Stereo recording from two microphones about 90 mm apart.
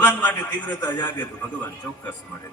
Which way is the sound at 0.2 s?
20° left (ahead or behind).